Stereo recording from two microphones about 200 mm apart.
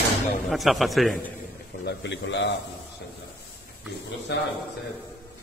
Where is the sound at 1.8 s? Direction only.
60° left (ahead or behind).